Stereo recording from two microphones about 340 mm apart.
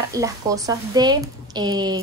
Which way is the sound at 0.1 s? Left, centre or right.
Centre.